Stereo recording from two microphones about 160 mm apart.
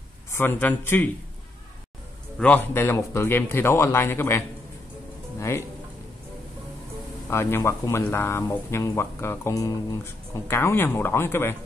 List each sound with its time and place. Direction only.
0.3 s speech: 15° left (ahead or behind)
2.3 s speech: 10° left (ahead or behind)
5.4 s speech: 20° left (ahead or behind)
7.2 s speech: 15° left (ahead or behind)